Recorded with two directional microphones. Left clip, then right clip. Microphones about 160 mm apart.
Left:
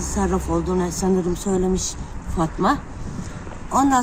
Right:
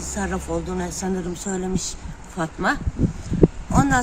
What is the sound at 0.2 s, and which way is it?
A woman's voice, 35° right (ahead or behind).